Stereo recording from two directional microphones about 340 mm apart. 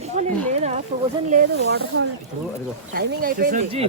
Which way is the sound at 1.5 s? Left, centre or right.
Right.